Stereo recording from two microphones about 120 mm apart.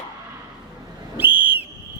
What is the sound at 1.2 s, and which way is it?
Whistle, 15° right (ahead or behind).